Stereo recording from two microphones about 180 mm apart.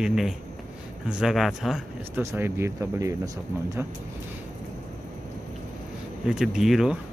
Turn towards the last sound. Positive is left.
turn(degrees=0)  # may be behind; listen again after turning